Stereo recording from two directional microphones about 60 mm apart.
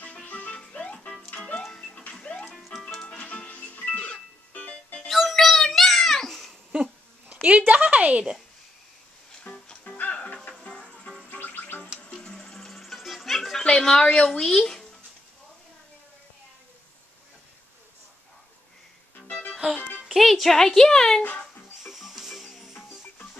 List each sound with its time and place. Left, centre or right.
0.0 s music: left
1.6 s music: centre
3.1 s music: centre
5.0 s music: centre
6.7 s dog: right
7.4 s a woman's voice: right
9.4 s music: left
11.2 s music: left
12.0 s music: centre
13.7 s a sound: centre
14.0 s a woman's voice: centre
19.5 s music: centre
20.1 s a woman's voice: centre
21.8 s music: centre